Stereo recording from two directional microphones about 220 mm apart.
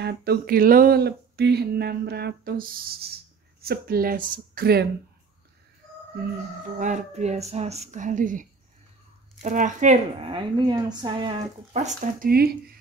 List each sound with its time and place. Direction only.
0.0 s speech: 45° right (ahead or behind)
6.8 s speech: 35° right (ahead or behind)